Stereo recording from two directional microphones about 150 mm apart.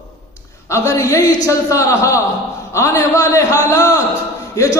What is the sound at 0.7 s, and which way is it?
A man's voice, 20° left (ahead or behind).